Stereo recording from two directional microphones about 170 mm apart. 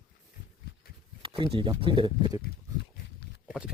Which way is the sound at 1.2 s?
30° right (ahead or behind).